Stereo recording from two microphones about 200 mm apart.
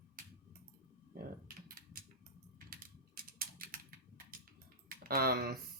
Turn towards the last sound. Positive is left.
turn(degrees=-50)  # may be behind; listen again after turning